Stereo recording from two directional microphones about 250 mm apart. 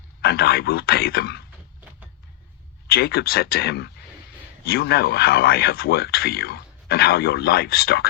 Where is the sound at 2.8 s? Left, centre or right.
Left.